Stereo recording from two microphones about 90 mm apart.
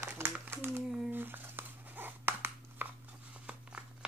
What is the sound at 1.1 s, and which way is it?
Crumpling, 20° right (ahead or behind).